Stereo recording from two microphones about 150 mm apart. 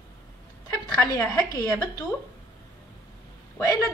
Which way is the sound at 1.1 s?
20° left (ahead or behind).